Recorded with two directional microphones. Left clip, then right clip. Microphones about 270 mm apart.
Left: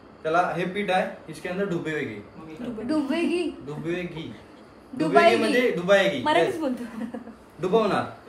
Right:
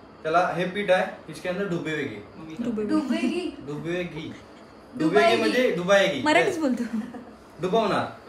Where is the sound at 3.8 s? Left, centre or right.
Centre.